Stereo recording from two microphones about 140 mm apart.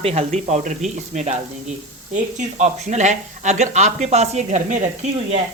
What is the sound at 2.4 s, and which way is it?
Speech, 55° right (ahead or behind).